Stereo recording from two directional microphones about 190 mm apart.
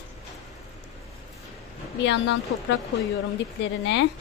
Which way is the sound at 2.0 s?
70° left (ahead or behind).